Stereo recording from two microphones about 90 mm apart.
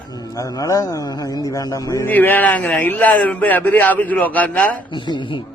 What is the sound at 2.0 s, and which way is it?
Speech, 20° left (ahead or behind).